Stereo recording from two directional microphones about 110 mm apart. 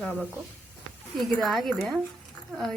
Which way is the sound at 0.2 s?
15° right (ahead or behind).